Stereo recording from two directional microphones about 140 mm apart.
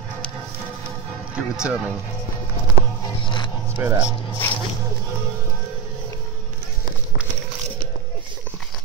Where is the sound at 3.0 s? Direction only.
35° left (ahead or behind).